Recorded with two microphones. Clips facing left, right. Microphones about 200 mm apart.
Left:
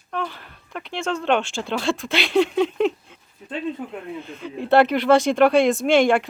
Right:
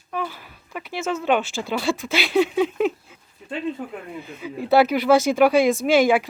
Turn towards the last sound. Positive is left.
turn(degrees=0)  # may be behind; listen again after turning